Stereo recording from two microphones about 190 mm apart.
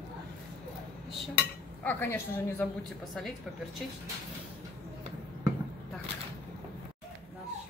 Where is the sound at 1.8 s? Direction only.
10° left (ahead or behind).